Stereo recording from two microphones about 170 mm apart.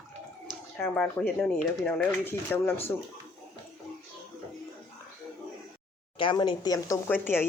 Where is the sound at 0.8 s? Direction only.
10° left (ahead or behind).